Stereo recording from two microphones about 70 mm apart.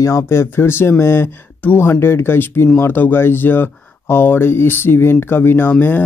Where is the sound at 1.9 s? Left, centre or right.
Left.